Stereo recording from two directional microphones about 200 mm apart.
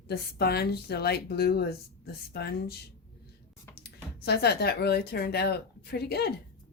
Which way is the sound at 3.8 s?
55° left (ahead or behind).